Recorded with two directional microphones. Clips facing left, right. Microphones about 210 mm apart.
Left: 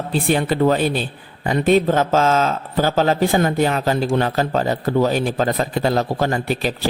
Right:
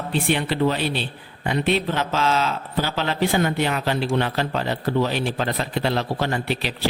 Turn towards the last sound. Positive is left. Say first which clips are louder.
# left 4 dB
turn(degrees=45)  # may be behind; listen again after turning